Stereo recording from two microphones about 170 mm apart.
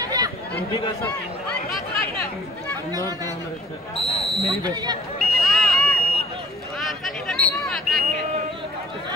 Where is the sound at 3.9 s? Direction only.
35° left (ahead or behind).